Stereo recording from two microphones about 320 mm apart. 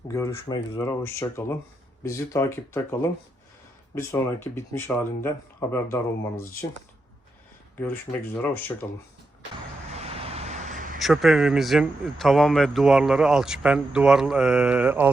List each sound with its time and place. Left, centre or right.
0.1 s speech: centre
8.4 s speech: centre
9.9 s vehicle: centre
11.0 s speech: centre